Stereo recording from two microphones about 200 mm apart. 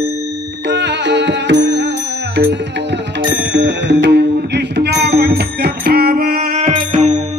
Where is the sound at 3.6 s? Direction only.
60° right (ahead or behind).